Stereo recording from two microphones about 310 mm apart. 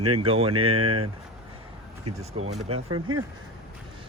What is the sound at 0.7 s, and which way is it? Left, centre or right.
Speech, right.